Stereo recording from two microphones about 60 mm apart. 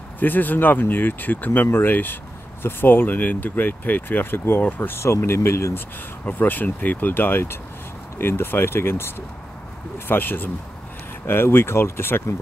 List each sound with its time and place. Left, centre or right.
0.2 s speech: left
6.2 s speech: left